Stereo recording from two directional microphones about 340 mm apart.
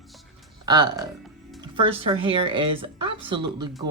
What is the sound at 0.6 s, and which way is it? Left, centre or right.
Speech, centre.